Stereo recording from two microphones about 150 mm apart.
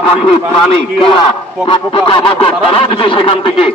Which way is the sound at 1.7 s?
35° left (ahead or behind).